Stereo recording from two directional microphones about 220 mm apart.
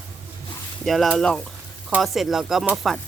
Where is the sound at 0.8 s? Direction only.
Centre (ahead or behind).